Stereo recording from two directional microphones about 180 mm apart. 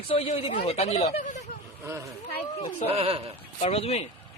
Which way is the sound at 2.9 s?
35° right (ahead or behind).